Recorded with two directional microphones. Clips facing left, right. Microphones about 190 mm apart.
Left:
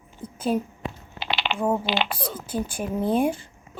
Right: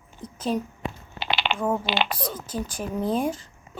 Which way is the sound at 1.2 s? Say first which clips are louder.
Right 1 dB; 50° right (ahead or behind).